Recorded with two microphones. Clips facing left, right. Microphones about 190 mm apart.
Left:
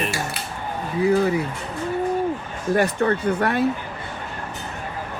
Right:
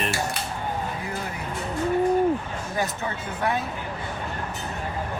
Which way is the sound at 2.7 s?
70° left (ahead or behind).